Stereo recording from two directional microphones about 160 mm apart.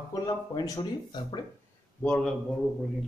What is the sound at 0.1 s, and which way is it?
Speech, 25° left (ahead or behind).